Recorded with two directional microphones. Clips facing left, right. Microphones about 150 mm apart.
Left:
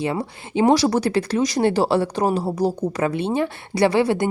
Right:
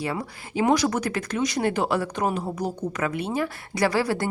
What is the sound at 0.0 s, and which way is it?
Speech, 25° left (ahead or behind).